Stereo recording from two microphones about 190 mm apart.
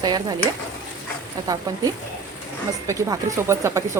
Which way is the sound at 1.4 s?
20° right (ahead or behind).